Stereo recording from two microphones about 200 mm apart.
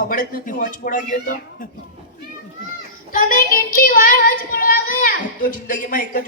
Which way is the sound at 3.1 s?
45° left (ahead or behind).